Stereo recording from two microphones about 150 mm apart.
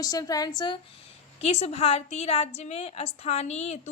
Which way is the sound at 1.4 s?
45° left (ahead or behind).